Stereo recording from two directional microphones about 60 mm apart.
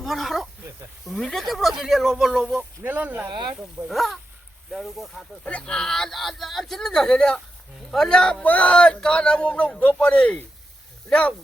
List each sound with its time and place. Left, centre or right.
0.0 s a sound: centre
1.0 s speech: centre
2.6 s speech: right
3.8 s speech: centre
5.5 s speech: left
5.7 s speech: centre